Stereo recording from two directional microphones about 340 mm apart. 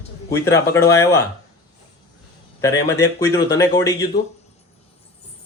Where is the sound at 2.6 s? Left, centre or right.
Centre.